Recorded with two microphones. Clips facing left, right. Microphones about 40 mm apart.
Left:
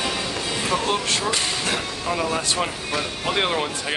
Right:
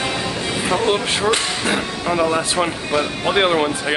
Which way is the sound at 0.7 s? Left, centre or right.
Right.